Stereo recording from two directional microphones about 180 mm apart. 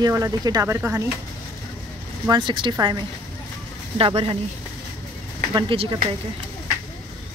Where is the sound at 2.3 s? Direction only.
25° right (ahead or behind).